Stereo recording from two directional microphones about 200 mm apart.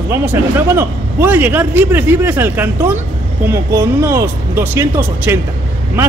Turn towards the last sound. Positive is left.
turn(degrees=-10)  # may be behind; listen again after turning